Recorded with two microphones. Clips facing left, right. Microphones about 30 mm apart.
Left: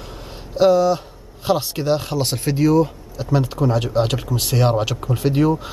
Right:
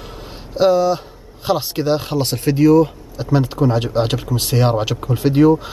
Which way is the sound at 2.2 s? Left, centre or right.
Centre.